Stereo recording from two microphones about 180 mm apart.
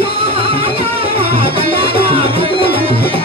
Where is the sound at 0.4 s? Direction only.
30° right (ahead or behind).